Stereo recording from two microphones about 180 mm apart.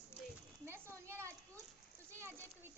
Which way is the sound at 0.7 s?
15° right (ahead or behind).